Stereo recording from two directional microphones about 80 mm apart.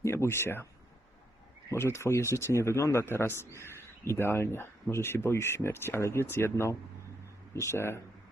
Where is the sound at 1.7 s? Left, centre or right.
Left.